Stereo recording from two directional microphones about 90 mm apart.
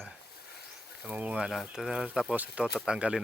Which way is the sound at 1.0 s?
15° right (ahead or behind).